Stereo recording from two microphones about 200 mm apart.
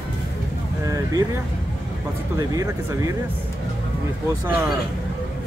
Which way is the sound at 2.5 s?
15° right (ahead or behind).